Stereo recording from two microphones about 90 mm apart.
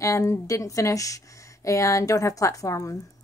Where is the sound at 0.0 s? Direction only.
35° left (ahead or behind).